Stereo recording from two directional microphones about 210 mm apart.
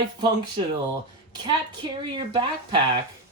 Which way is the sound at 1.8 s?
25° right (ahead or behind).